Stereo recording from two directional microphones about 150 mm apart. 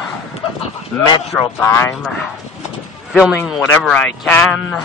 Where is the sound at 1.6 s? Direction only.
15° left (ahead or behind).